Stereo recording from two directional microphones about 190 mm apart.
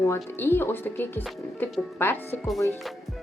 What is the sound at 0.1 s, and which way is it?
A woman's voice, 10° left (ahead or behind).